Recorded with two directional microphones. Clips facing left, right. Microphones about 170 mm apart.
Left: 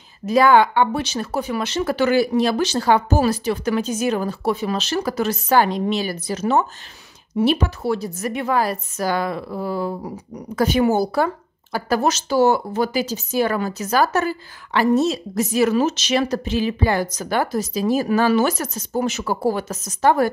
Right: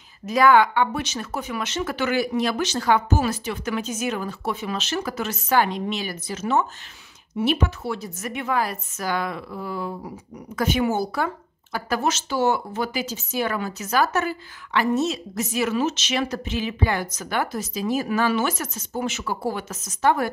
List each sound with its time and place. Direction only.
0.2 s a woman's voice: 30° left (ahead or behind)